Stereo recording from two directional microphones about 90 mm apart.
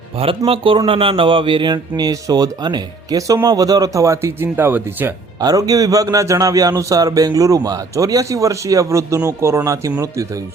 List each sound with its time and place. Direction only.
0.2 s a man's voice: 90° right; by 5.1 s 20° right (ahead or behind)
5.4 s a man's voice: 45° right (ahead or behind)